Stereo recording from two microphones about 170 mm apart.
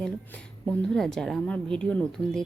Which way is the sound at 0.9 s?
5° left (ahead or behind).